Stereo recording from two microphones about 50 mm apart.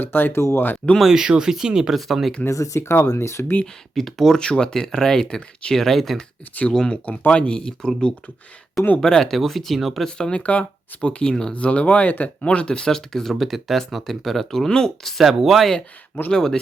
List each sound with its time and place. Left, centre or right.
0.0 s speech: left
1.0 s speech: centre
2.0 s speech: centre
2.5 s speech: left
3.9 s speech: centre
4.4 s speech: centre
6.7 s speech: centre
10.1 s speech: centre
10.4 s speech: left
11.5 s speech: left; by 15.2 s centre
15.2 s speech: centre
16.3 s speech: centre